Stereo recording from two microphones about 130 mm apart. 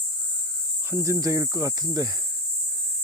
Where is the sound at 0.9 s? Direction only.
20° right (ahead or behind).